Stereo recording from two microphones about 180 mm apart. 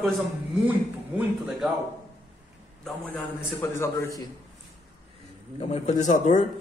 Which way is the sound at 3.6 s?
15° left (ahead or behind).